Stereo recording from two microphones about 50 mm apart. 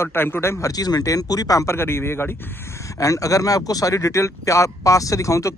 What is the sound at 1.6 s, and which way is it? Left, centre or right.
Speech, left.